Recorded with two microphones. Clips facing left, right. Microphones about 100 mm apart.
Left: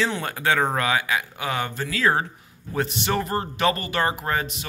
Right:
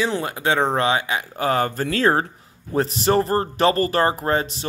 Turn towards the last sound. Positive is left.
turn(degrees=-30)  # may be behind; listen again after turning